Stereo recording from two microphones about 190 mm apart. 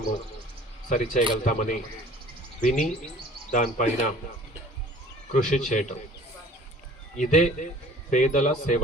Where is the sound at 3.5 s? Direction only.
40° left (ahead or behind).